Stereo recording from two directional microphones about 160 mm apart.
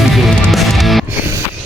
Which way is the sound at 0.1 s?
Centre (ahead or behind).